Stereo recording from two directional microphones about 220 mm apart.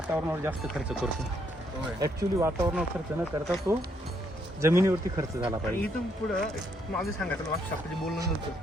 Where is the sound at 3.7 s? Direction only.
10° right (ahead or behind).